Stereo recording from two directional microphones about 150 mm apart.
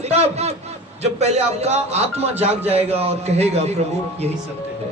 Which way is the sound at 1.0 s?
45° right (ahead or behind).